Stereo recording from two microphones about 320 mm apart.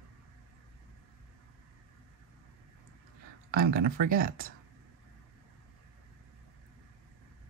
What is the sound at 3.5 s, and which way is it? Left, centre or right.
Speech, right.